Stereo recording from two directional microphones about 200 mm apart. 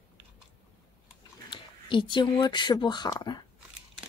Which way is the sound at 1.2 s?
25° left (ahead or behind).